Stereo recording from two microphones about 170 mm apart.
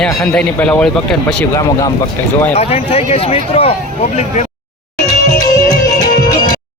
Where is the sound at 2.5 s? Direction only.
35° left (ahead or behind).